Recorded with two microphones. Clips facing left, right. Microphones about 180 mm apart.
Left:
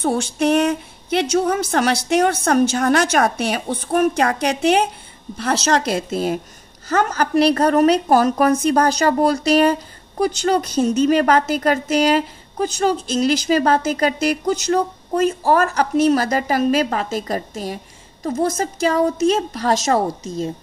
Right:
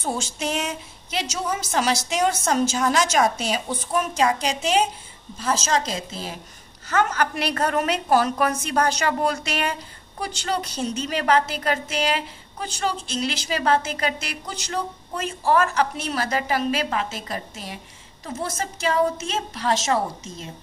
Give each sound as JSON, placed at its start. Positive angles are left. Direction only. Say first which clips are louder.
{"t": 0.0, "sound": "a woman's voice", "louder": "left 9 dB", "side_deg": 60}
{"t": 6.9, "sound": "a woman's voice", "louder": "left 4 dB", "side_deg": 35}